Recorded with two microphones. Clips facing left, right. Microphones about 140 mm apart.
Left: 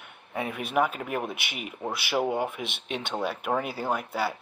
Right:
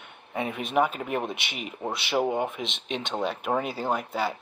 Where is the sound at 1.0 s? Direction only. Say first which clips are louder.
Right 2 dB; centre (ahead or behind).